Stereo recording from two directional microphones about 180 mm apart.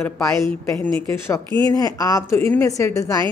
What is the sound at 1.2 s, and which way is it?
A woman's voice, 15° left (ahead or behind).